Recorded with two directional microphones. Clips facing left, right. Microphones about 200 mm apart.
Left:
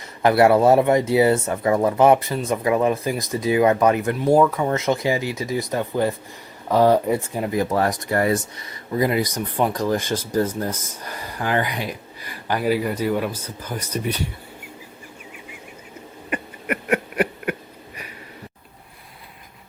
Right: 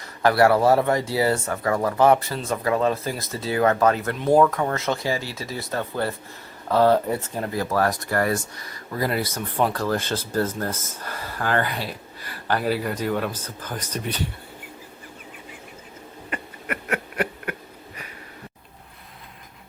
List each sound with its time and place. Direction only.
0.0 s speech: 20° left (ahead or behind)
16.3 s owl: 15° left (ahead or behind)